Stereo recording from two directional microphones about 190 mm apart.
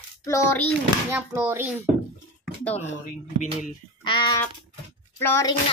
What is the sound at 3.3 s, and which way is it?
Speech, 40° left (ahead or behind).